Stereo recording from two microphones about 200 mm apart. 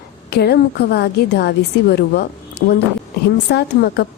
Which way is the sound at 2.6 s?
60° left (ahead or behind).